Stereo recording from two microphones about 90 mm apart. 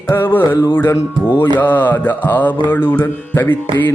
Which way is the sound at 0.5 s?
55° left (ahead or behind).